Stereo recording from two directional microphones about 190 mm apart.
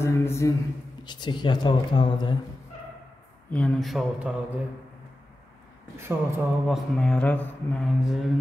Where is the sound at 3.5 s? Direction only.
5° left (ahead or behind).